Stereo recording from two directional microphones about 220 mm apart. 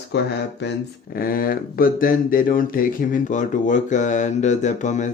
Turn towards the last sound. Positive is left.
turn(degrees=35)  # may be behind; listen again after turning